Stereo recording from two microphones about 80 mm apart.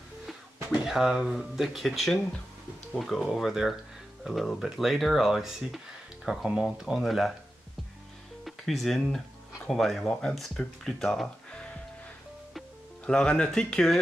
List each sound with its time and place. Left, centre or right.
0.8 s speech: centre
8.5 s speech: centre
13.0 s speech: centre